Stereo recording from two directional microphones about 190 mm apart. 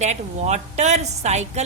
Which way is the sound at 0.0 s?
35° right (ahead or behind).